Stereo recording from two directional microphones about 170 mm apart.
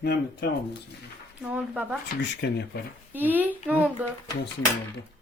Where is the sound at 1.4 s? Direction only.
10° right (ahead or behind).